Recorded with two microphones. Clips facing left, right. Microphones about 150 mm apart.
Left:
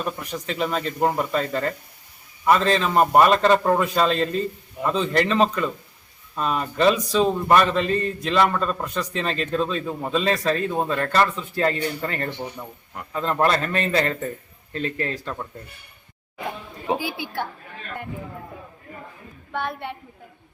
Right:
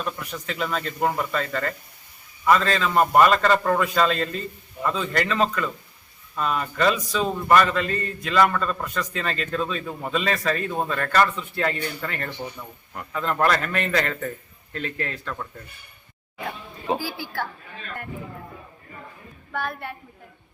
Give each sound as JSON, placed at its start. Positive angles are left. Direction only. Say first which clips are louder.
{"t": 0.3, "sound": "a man's voice", "louder": "left 3 dB", "side_deg": 30}
{"t": 16.8, "sound": "a man's voice", "louder": "left 1 dB", "side_deg": 20}
{"t": 19.5, "sound": "a man's voice", "louder": "left 2 dB", "side_deg": 25}